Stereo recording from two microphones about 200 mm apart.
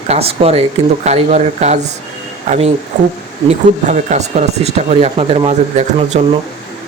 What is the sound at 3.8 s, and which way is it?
Speech, 35° right (ahead or behind).